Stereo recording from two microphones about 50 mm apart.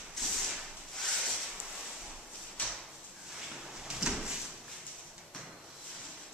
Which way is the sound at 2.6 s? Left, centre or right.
Left.